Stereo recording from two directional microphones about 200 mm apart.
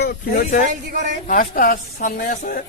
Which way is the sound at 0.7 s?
40° right (ahead or behind).